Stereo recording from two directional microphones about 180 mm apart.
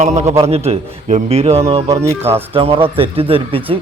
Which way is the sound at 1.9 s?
15° right (ahead or behind).